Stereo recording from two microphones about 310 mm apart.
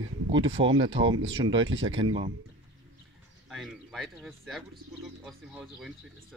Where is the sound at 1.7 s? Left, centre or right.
Right.